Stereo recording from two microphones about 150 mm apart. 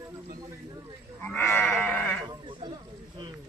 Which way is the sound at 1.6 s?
5° left (ahead or behind).